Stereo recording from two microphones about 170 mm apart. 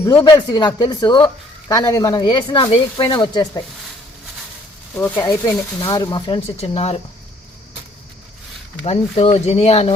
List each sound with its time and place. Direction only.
0.2 s speech: 25° left (ahead or behind)
4.9 s speech: 10° left (ahead or behind); by 7.0 s 35° left (ahead or behind)
8.8 s speech: 35° left (ahead or behind)